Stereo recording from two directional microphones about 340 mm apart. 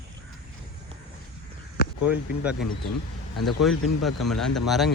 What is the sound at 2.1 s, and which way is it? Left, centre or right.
Speech, centre.